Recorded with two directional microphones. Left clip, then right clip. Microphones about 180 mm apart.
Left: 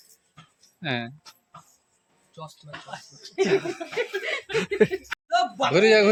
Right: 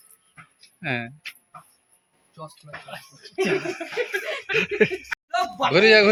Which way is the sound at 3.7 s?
15° right (ahead or behind).